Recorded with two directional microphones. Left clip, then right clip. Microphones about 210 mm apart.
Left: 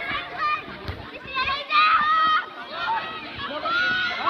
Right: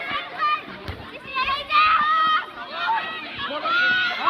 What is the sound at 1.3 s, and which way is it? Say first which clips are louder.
Children playing: right 1 dB; 55° right (ahead or behind).